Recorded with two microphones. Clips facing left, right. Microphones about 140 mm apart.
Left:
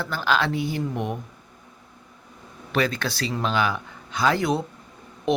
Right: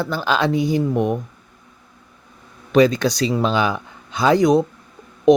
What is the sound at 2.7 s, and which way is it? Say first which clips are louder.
Speech: right 10 dB; 15° right (ahead or behind).